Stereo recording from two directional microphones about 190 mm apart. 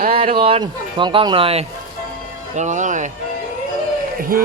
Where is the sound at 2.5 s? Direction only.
40° right (ahead or behind).